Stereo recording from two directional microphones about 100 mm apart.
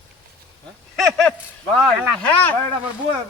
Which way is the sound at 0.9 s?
5° left (ahead or behind).